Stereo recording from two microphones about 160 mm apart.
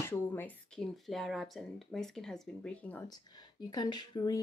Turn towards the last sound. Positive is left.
turn(degrees=25)  # may be behind; listen again after turning